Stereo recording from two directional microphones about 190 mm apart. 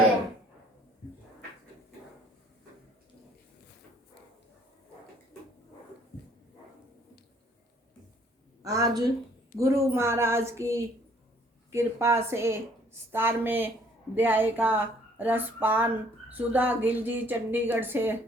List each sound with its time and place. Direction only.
8.6 s a woman's voice: 20° right (ahead or behind)